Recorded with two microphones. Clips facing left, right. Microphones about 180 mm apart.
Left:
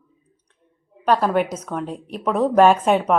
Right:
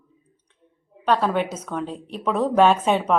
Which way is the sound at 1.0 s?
5° left (ahead or behind).